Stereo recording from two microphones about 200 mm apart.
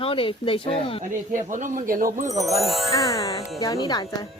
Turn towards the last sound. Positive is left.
turn(degrees=20)  # may be behind; listen again after turning